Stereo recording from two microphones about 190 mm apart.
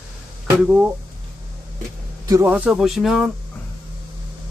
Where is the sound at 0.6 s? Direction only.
10° right (ahead or behind).